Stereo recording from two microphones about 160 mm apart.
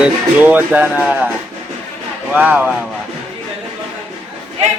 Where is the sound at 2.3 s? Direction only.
10° right (ahead or behind).